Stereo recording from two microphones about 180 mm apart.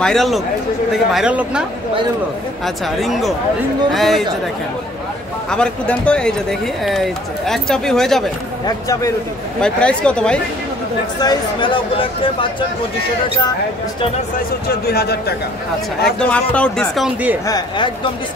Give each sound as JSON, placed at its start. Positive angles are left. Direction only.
{"t": 0.0, "sound": "speech", "side_deg": 0}
{"t": 2.6, "sound": "speech", "side_deg": 0}
{"t": 5.5, "sound": "speech", "side_deg": 5}
{"t": 8.6, "sound": "speech", "side_deg": 20}
{"t": 9.6, "sound": "speech", "side_deg": 5}
{"t": 11.1, "sound": "speech", "side_deg": 25}
{"t": 14.7, "sound": "a man's voice", "side_deg": 60}
{"t": 16.3, "sound": "speech", "side_deg": 5}
{"t": 17.5, "sound": "speech", "side_deg": 25}